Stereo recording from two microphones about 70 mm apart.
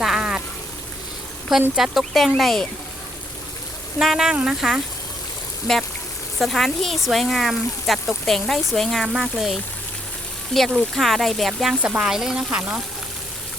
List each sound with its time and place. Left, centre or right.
0.0 s a sound: centre
1.7 s speech: centre
4.0 s speech: centre
5.7 s speech: centre
11.7 s speech: centre